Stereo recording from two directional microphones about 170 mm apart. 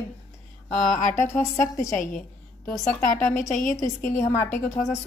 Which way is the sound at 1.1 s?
15° left (ahead or behind).